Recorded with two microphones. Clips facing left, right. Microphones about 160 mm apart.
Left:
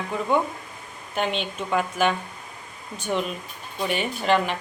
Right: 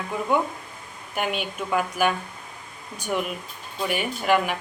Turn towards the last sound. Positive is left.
turn(degrees=-10)  # may be behind; listen again after turning